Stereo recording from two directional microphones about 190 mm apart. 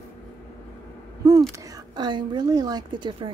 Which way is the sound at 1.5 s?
20° right (ahead or behind).